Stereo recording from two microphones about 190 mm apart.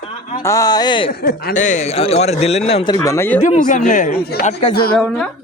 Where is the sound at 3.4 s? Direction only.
40° left (ahead or behind).